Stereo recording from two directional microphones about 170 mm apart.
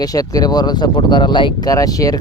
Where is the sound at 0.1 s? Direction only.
20° left (ahead or behind).